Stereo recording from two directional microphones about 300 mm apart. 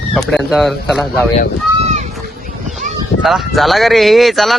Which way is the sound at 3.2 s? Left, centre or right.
Centre.